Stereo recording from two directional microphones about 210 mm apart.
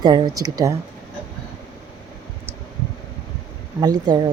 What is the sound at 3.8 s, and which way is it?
Speech, 20° right (ahead or behind).